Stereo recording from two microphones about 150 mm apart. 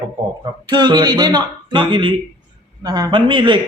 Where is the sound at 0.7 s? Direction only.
30° right (ahead or behind).